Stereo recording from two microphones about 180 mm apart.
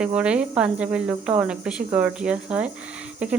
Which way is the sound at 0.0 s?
5° right (ahead or behind).